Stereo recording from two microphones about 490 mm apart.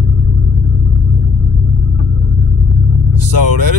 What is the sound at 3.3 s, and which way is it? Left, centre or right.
Speech, right.